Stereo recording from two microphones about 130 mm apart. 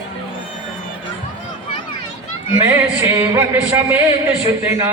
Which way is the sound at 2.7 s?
20° right (ahead or behind).